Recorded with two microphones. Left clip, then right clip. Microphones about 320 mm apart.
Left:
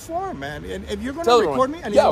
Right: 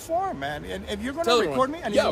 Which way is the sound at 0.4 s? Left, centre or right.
Centre.